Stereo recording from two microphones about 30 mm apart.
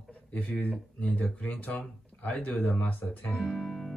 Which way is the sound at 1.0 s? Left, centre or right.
Left.